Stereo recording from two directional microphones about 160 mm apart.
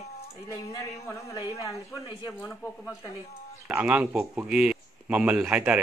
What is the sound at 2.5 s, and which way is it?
Speech, 5° left (ahead or behind).